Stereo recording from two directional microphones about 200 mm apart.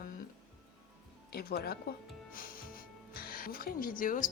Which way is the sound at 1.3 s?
50° left (ahead or behind).